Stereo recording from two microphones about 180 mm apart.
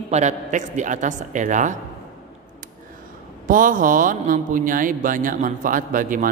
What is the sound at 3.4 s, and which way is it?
A man's voice, 50° right (ahead or behind).